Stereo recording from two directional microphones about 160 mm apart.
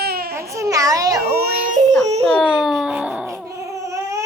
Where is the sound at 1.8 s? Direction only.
50° right (ahead or behind).